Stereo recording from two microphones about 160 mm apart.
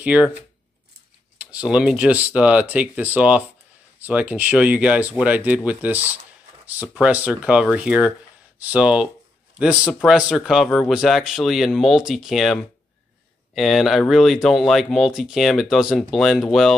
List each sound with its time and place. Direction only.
0.0 s speech: 5° right (ahead or behind)
1.4 s speech: 5° right (ahead or behind)
13.6 s speech: centre (ahead or behind)